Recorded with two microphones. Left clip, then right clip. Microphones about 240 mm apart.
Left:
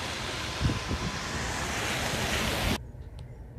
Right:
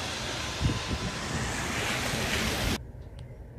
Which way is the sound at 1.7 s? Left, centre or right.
Left.